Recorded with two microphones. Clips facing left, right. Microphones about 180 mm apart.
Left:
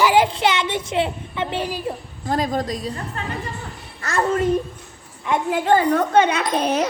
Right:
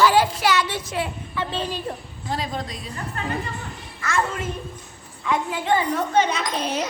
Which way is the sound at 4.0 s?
35° left (ahead or behind).